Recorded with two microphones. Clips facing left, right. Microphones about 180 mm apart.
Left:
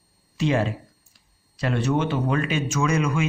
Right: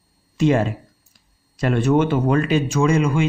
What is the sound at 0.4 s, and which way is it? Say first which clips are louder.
A man's voice: right 5 dB; 45° right (ahead or behind).